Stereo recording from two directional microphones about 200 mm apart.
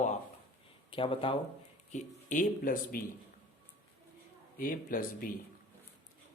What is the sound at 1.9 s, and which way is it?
Speech, 40° left (ahead or behind).